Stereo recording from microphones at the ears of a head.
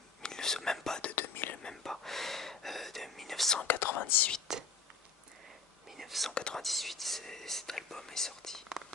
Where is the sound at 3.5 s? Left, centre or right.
Left.